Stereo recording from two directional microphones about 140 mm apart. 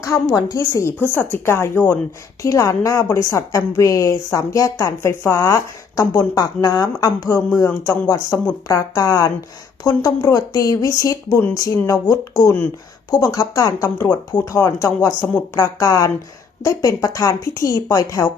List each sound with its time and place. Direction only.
0.0 s a woman's voice: 20° left (ahead or behind)